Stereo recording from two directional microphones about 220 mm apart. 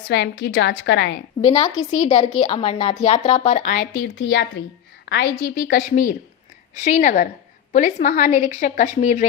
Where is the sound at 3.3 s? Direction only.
35° left (ahead or behind).